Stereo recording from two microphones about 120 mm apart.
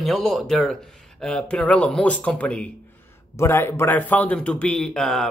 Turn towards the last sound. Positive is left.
turn(degrees=5)  # may be behind; listen again after turning